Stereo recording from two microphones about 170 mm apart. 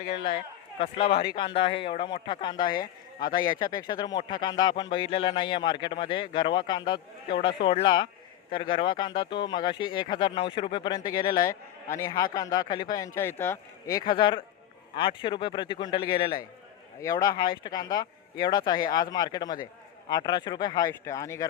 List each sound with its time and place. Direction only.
0.0 s speech: 35° left (ahead or behind); by 14.0 s 15° left (ahead or behind)
14.1 s speech: 30° left (ahead or behind)